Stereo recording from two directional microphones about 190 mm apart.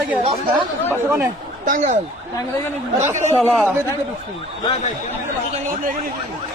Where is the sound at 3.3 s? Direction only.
5° left (ahead or behind).